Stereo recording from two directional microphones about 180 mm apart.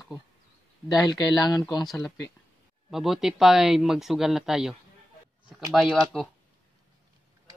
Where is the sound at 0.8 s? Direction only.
20° left (ahead or behind).